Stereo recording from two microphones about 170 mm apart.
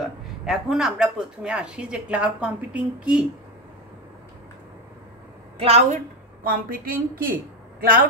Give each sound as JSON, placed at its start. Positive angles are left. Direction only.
{"t": 0.5, "sound": "speech", "side_deg": 0}
{"t": 5.6, "sound": "a woman's voice", "side_deg": -40}
{"t": 6.4, "sound": "a woman's voice", "side_deg": -55}